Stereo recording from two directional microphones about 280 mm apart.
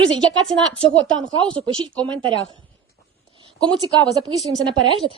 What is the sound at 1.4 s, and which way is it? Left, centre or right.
Speech, centre.